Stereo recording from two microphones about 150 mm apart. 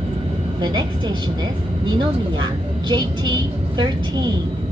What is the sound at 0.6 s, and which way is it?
A woman's voice, 30° right (ahead or behind).